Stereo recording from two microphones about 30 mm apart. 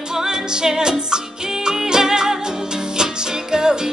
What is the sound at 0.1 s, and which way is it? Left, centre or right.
Music, centre.